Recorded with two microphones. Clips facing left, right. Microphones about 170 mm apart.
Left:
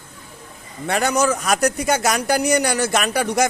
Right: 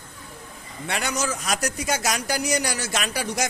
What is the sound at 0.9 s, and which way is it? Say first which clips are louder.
A man's voice: left 8 dB; 50° left (ahead or behind).